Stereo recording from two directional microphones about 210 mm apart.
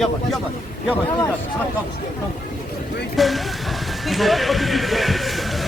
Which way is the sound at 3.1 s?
Centre (ahead or behind).